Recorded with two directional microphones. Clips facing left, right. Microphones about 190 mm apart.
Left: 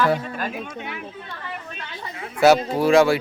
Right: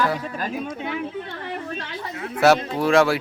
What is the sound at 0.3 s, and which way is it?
Speech, 35° right (ahead or behind).